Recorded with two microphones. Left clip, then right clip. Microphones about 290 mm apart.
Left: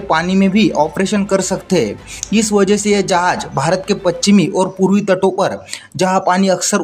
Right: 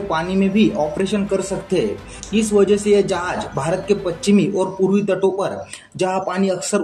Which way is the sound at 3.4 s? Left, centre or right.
Left.